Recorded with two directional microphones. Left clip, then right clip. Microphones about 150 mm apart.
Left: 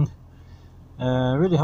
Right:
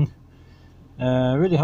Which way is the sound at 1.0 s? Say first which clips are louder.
Right 2 dB; 35° right (ahead or behind).